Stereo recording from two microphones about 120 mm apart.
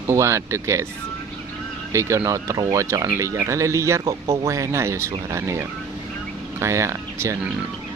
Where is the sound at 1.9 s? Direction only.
25° right (ahead or behind).